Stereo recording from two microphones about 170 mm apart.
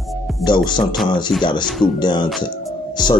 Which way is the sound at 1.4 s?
25° left (ahead or behind).